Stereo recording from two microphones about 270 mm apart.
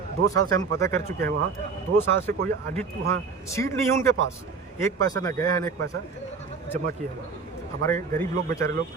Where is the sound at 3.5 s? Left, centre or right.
Centre.